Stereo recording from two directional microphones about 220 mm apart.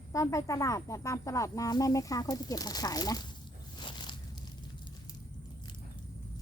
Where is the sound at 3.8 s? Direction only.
20° left (ahead or behind).